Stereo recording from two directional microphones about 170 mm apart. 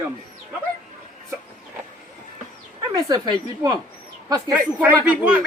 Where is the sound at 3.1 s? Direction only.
25° right (ahead or behind).